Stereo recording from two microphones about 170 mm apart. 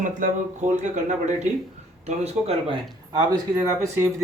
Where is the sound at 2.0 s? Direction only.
40° right (ahead or behind).